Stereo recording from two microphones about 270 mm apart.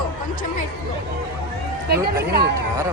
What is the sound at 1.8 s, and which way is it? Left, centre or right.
Speech, right.